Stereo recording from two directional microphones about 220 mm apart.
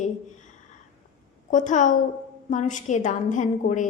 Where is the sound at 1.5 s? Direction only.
35° left (ahead or behind).